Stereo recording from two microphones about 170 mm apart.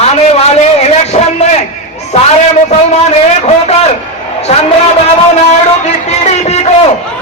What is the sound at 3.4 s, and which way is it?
Speech, 40° left (ahead or behind).